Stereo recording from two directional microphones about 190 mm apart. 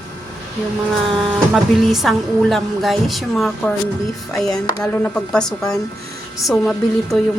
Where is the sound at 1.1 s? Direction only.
Centre (ahead or behind).